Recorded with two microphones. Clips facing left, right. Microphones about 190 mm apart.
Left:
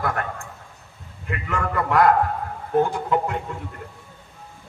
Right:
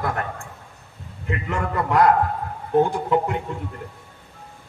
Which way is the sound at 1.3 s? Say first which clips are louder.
Right 1 dB; 25° right (ahead or behind).